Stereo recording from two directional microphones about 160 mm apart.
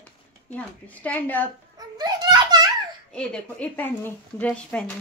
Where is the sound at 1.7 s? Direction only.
25° right (ahead or behind).